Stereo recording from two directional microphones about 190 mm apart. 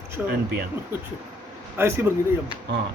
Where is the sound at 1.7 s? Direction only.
10° right (ahead or behind).